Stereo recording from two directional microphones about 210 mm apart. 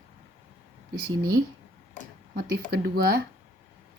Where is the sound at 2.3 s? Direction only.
50° right (ahead or behind).